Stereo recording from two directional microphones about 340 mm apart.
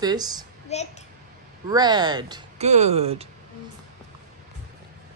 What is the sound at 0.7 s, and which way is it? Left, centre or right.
Speech, centre.